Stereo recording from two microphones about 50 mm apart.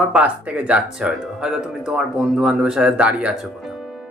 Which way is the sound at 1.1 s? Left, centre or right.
Centre.